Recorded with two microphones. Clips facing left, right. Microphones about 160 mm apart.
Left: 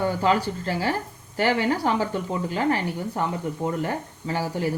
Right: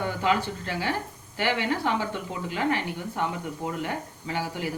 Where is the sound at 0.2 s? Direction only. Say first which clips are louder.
Left 3 dB; 40° left (ahead or behind).